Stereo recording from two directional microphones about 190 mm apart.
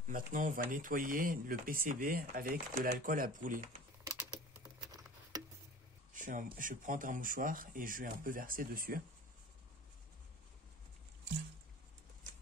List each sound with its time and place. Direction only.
0.0 s speech: 45° right (ahead or behind)
6.1 s speech: 45° right (ahead or behind)